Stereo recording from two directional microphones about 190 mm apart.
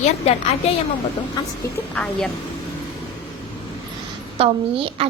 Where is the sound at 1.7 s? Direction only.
5° left (ahead or behind).